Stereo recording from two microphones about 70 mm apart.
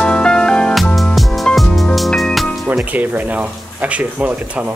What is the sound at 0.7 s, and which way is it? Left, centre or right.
Music, centre.